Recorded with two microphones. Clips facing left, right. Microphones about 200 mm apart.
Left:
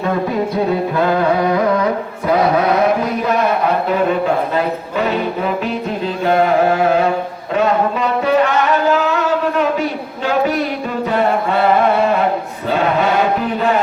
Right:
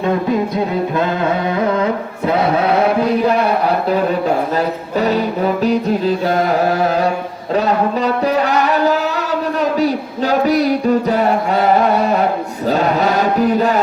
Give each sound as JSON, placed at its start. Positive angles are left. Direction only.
{"t": 2.2, "sound": "chant", "side_deg": -30}
{"t": 4.5, "sound": "music", "side_deg": -40}